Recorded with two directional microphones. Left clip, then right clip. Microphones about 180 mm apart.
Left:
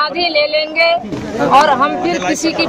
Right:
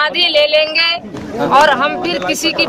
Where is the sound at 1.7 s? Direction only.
20° right (ahead or behind).